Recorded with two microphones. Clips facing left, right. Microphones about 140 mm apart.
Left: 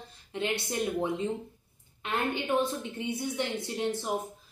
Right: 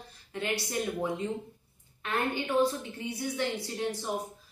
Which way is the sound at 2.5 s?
20° left (ahead or behind).